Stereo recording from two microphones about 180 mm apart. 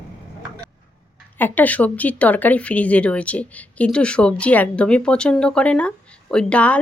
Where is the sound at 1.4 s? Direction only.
10° left (ahead or behind).